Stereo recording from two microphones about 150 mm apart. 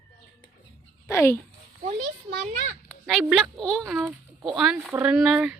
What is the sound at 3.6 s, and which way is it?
Speech, 5° left (ahead or behind).